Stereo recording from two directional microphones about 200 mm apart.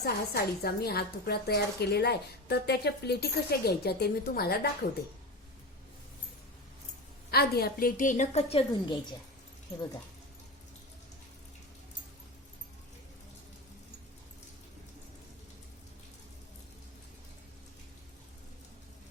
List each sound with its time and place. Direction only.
0.0 s a woman's voice: 50° left (ahead or behind)
7.3 s a woman's voice: 50° left (ahead or behind); by 9.0 s 30° left (ahead or behind)